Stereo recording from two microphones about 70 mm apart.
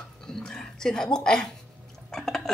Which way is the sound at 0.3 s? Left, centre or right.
Centre.